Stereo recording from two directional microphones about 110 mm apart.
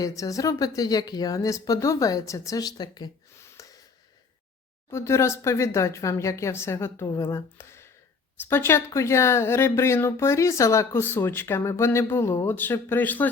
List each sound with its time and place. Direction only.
0.0 s speech: 30° left (ahead or behind)
3.3 s gasp: 30° left (ahead or behind)
4.9 s speech: 25° left (ahead or behind)